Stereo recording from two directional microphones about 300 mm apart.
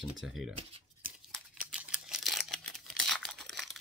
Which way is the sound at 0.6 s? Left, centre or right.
Centre.